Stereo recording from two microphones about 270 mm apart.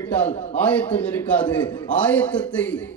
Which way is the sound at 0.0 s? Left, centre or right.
Centre.